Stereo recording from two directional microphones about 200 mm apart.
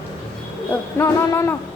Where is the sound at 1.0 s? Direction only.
15° left (ahead or behind).